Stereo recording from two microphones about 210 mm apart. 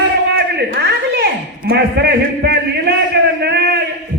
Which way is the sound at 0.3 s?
50° right (ahead or behind).